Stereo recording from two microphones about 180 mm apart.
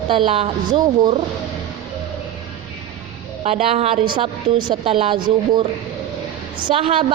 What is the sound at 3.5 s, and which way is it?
A woman's voice, 35° right (ahead or behind).